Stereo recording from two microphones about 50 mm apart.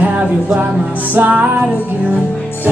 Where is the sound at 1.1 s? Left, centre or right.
Right.